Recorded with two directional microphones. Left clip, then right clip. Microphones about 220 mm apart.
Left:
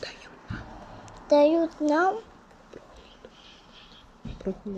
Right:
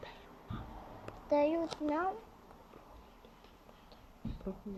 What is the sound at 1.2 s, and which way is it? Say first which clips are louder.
Speech: left 11 dB; 15° left (ahead or behind).